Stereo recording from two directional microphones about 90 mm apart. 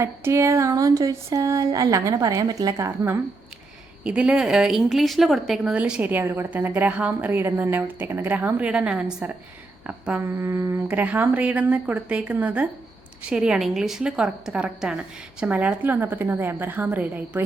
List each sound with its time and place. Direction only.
0.0 s a sound: 30° right (ahead or behind)
2.7 s a woman's voice: 30° right (ahead or behind)
4.0 s a woman's voice: 10° right (ahead or behind)
5.7 s a woman's voice: 15° right (ahead or behind)
10.2 s a woman's voice: 30° right (ahead or behind)
10.8 s a woman's voice: 15° right (ahead or behind)